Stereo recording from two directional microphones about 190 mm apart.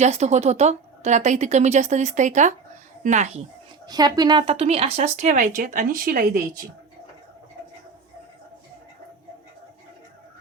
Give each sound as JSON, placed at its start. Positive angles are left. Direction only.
{"t": 0.0, "sound": "speech", "side_deg": -35}
{"t": 3.8, "sound": "speech", "side_deg": -20}